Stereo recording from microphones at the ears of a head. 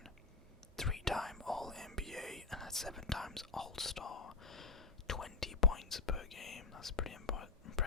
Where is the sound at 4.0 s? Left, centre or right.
Left.